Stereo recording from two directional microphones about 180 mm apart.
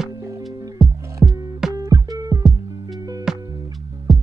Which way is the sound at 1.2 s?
15° right (ahead or behind).